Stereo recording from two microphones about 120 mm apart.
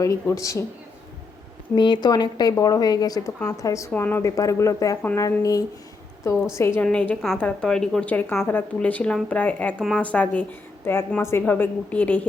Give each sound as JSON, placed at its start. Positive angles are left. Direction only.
{"t": 0.0, "sound": "speech", "side_deg": 25}
{"t": 1.7, "sound": "a woman's voice", "side_deg": 40}
{"t": 3.9, "sound": "speech", "side_deg": 15}
{"t": 4.2, "sound": "speech", "side_deg": 25}